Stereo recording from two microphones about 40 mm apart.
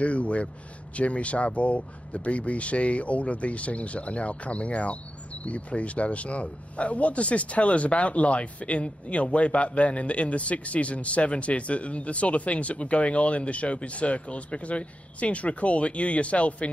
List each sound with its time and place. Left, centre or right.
0.0 s speech: left